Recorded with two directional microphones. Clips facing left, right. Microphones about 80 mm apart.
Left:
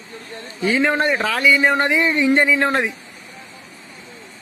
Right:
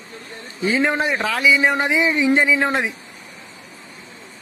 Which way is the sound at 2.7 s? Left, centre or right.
Centre.